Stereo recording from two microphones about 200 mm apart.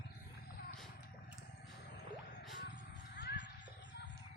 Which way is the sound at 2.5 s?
60° left (ahead or behind).